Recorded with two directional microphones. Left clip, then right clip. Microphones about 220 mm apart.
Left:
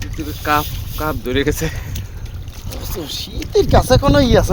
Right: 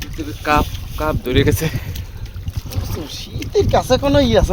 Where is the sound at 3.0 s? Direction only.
40° left (ahead or behind).